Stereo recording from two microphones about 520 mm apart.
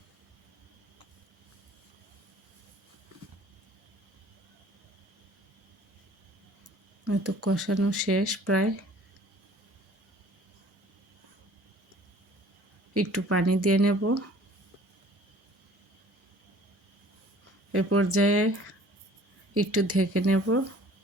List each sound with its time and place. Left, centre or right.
7.0 s speech: right
12.9 s speech: right
17.7 s speech: right